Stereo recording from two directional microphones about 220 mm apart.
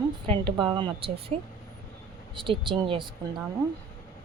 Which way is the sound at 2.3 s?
20° right (ahead or behind).